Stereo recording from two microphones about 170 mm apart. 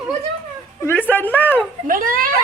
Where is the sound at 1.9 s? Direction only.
55° right (ahead or behind).